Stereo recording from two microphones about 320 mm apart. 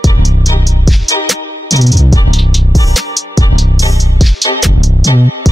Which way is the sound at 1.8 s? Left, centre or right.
Centre.